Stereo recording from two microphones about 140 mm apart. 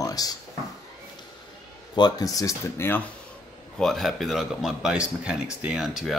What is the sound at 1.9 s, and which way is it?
Speech, 30° left (ahead or behind).